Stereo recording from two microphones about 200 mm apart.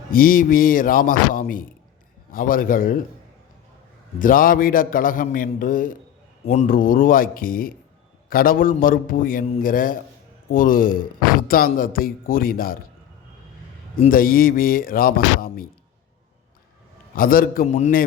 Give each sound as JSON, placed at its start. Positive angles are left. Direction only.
{"t": 0.1, "sound": "speech", "side_deg": 45}
{"t": 4.2, "sound": "a man's voice", "side_deg": 45}
{"t": 6.7, "sound": "speech", "side_deg": 45}
{"t": 13.9, "sound": "speech", "side_deg": 45}
{"t": 17.2, "sound": "speech", "side_deg": 45}